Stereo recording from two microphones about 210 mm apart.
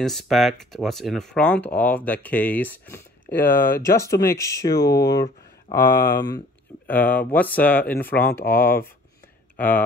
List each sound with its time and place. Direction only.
0.0 s speech: centre (ahead or behind)
3.4 s speech: 45° left (ahead or behind)
3.8 s speech: 15° left (ahead or behind)
5.9 s speech: 45° left (ahead or behind)
6.9 s speech: 10° left (ahead or behind)
8.5 s speech: 45° left (ahead or behind)
9.6 s speech: 5° left (ahead or behind)